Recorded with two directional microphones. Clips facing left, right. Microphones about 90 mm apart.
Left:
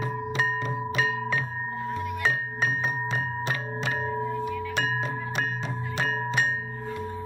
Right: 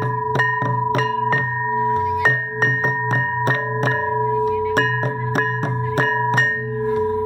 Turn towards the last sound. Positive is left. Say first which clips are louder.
# right 9 dB
turn(degrees=-45)  # may be behind; listen again after turning